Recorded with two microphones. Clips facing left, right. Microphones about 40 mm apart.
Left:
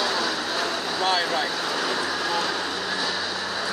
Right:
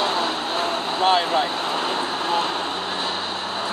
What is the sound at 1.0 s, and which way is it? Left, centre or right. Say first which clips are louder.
Vehicle: right 5 dB; right.